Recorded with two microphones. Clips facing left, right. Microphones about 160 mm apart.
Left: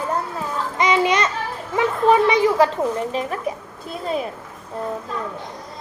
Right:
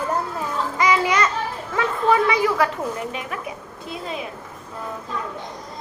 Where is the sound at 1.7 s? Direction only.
20° left (ahead or behind).